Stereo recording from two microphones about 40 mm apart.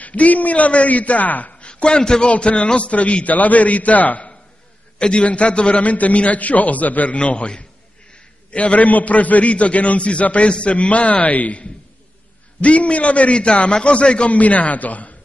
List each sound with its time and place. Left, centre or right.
0.0 s a man's voice: left
1.5 s a man's voice: left
4.9 s a man's voice: left
14.3 s a man's voice: left